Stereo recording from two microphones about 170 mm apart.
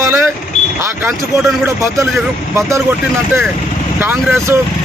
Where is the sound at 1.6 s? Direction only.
15° right (ahead or behind).